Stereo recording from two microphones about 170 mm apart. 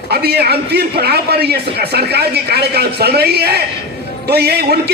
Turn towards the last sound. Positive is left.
turn(degrees=-70)  # may be behind; listen again after turning